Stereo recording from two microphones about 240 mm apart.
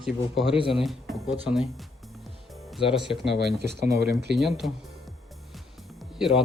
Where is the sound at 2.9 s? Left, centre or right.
Centre.